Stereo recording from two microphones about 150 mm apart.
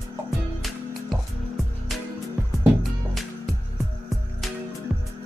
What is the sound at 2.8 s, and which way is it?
Music, centre (ahead or behind).